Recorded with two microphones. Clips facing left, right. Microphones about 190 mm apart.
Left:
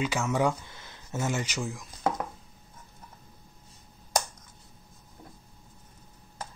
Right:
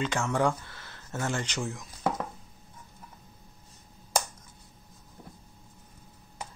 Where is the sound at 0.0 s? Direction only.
10° left (ahead or behind).